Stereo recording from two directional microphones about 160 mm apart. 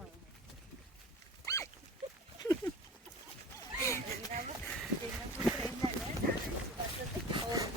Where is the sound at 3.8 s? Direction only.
15° left (ahead or behind).